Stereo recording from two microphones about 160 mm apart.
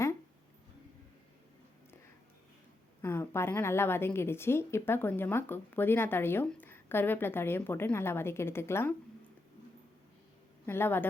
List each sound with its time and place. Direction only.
3.0 s a woman's voice: 15° left (ahead or behind)
10.7 s a woman's voice: 15° left (ahead or behind)